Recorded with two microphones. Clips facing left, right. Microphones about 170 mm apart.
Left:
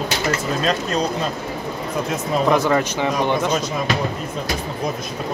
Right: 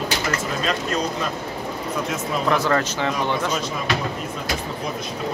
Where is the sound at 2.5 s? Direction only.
15° left (ahead or behind).